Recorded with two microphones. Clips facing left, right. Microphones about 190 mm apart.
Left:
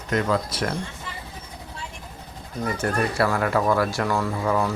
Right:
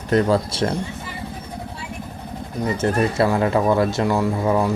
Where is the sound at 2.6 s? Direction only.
20° right (ahead or behind).